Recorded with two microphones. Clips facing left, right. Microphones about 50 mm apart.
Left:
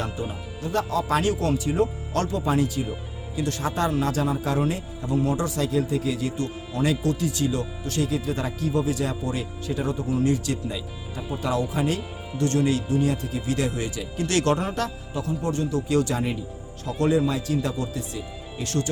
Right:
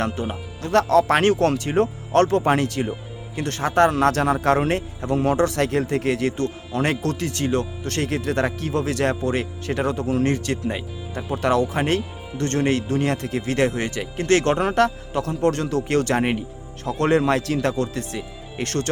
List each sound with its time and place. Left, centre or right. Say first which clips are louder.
0.0 s speech: right 5 dB; right
3.3 s speech: right 6 dB; right
14.3 s speech: right 5 dB; right
16.8 s a man's voice: right 3 dB; right
17.1 s speech: right 4 dB; right